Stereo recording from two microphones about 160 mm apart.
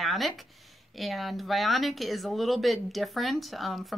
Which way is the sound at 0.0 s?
Centre (ahead or behind).